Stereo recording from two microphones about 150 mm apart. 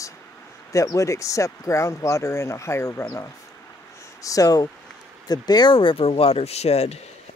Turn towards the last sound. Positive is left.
turn(degrees=45)  # may be behind; listen again after turning